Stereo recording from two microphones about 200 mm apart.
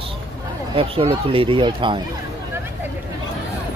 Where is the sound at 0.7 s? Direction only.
30° right (ahead or behind).